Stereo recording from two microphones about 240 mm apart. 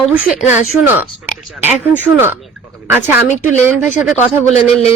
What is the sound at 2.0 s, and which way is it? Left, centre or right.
Speech, centre.